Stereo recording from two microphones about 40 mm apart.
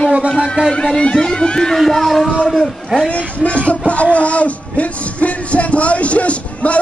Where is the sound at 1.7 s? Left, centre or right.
Centre.